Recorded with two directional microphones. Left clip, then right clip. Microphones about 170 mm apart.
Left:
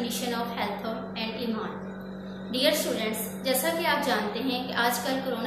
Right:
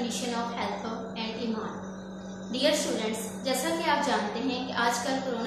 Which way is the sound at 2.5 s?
5° right (ahead or behind).